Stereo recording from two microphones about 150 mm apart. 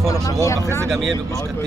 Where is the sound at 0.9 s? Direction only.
Centre (ahead or behind).